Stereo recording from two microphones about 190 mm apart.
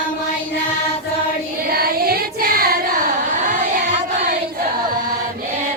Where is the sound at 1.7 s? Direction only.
55° right (ahead or behind).